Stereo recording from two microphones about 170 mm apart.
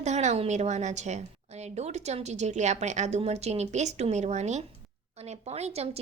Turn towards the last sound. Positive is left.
turn(degrees=-40)  # may be behind; listen again after turning